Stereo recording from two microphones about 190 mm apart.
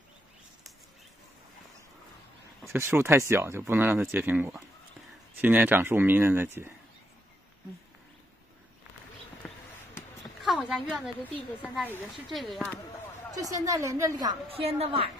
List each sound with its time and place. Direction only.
2.7 s speech: 10° right (ahead or behind)
9.4 s basketball bounce: 5° left (ahead or behind)
9.9 s a woman's voice: centre (ahead or behind)
13.3 s a woman's voice: 20° right (ahead or behind)